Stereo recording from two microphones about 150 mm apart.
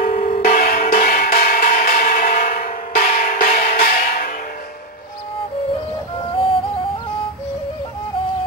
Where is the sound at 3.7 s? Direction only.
75° left (ahead or behind).